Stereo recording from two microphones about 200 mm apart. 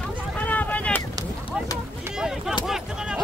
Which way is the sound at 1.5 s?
5° right (ahead or behind).